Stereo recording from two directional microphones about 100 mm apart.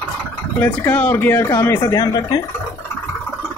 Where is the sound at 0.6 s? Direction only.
20° left (ahead or behind); by 2.3 s 40° left (ahead or behind).